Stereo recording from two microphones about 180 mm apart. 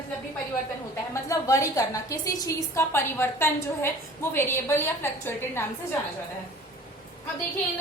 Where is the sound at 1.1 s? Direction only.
15° left (ahead or behind).